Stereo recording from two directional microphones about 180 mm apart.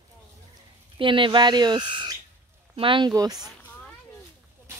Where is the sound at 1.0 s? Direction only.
30° right (ahead or behind).